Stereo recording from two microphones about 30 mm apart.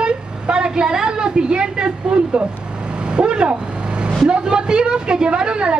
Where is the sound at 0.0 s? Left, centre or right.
Right.